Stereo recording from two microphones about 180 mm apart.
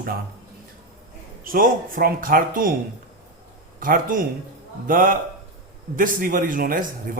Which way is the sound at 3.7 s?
50° right (ahead or behind).